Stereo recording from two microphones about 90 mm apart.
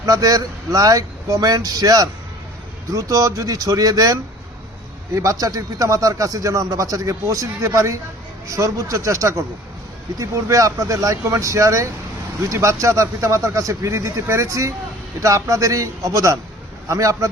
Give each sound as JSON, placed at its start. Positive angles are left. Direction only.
{"t": 0.0, "sound": "a man's voice", "side_deg": -45}